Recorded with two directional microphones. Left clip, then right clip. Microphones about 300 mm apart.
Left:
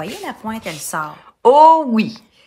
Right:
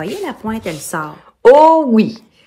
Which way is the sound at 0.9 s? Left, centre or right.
Left.